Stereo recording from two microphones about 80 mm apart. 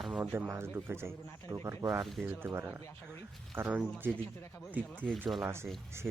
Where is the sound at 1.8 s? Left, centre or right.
Right.